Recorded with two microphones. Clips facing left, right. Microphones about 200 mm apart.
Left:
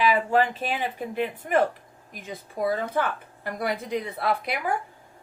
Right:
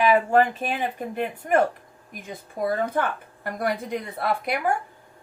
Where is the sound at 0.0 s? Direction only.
50° right (ahead or behind).